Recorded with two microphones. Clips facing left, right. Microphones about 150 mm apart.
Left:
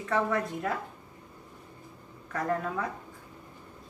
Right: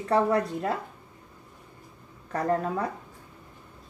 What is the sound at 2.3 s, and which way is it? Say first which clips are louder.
Speech: right 4 dB; 35° right (ahead or behind).